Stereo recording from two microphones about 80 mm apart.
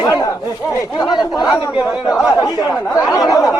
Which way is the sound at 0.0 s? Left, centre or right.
Left.